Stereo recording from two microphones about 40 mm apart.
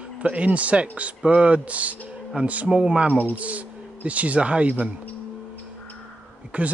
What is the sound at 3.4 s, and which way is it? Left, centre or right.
Speech, right.